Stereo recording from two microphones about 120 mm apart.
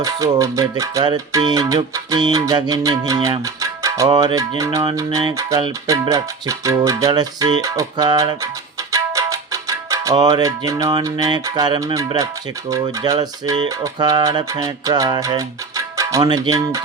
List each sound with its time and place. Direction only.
0.0 s music: 30° right (ahead or behind)
2.1 s speech: 35° right (ahead or behind)
3.6 s music: 25° right (ahead or behind)
7.1 s speech: 35° right (ahead or behind)
8.9 s music: 25° right (ahead or behind)
11.0 s speech: 30° right (ahead or behind)